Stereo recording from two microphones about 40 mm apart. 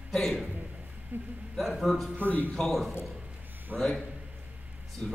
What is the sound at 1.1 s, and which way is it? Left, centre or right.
Speech, right.